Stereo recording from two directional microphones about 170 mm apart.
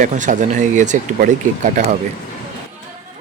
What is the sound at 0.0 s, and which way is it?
Speech, 45° right (ahead or behind).